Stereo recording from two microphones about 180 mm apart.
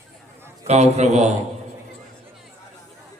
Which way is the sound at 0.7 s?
40° right (ahead or behind).